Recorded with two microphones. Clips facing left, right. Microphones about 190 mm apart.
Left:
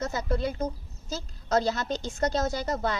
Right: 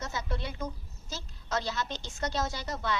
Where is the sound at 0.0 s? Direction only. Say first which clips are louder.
Left 8 dB; 45° left (ahead or behind).